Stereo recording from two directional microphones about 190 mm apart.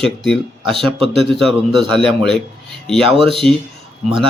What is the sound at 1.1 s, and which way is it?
Speech, centre (ahead or behind).